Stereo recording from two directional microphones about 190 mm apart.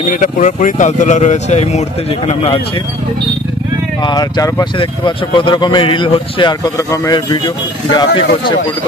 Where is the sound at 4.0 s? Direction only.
20° left (ahead or behind).